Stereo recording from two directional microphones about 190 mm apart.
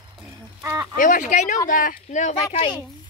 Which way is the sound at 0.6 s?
15° right (ahead or behind).